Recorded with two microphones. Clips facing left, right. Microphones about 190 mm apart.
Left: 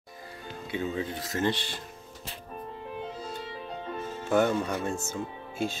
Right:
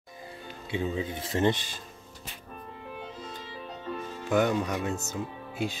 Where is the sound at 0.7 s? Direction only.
20° right (ahead or behind).